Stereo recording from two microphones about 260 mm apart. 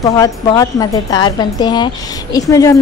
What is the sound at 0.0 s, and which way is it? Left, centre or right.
Speech, centre.